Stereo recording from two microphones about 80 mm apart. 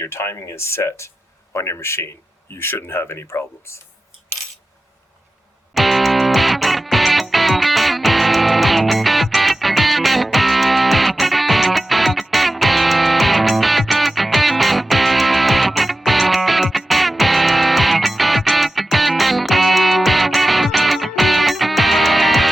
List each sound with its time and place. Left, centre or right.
0.0 s speech: left
5.7 s music: centre